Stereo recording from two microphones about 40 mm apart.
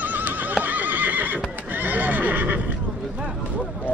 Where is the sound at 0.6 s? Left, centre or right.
Right.